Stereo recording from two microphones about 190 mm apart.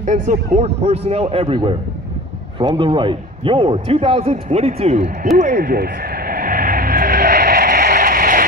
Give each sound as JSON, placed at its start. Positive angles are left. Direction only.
{"t": 0.0, "sound": "a man's voice", "side_deg": -40}
{"t": 5.4, "sound": "vehicle", "side_deg": -45}